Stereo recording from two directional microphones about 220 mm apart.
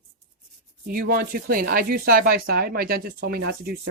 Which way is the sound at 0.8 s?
40° right (ahead or behind).